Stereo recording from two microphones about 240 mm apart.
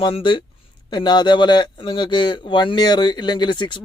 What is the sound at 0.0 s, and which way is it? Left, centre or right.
A man's voice, centre.